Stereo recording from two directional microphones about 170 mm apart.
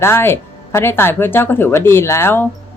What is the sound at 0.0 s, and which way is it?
Speech, 15° left (ahead or behind).